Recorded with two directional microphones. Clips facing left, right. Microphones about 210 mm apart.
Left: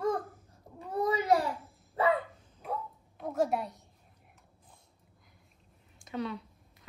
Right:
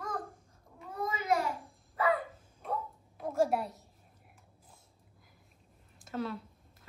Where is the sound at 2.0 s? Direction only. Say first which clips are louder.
Left 2 dB; 30° left (ahead or behind).